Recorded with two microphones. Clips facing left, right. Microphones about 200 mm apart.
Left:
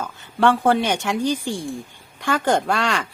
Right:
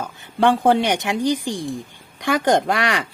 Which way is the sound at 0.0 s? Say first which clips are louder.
Right 1 dB; 15° right (ahead or behind).